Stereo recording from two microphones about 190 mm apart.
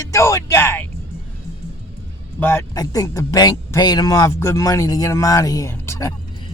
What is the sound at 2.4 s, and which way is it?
A man's voice, 15° left (ahead or behind).